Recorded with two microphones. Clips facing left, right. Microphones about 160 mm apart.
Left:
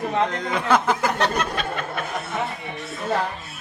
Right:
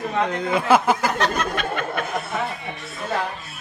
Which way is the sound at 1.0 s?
30° left (ahead or behind).